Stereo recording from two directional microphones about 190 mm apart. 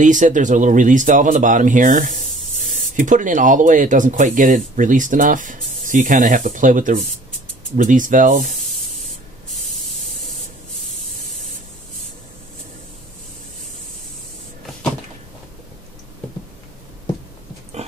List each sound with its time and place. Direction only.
0.0 s speech: 40° right (ahead or behind)
8.6 s spray: centre (ahead or behind)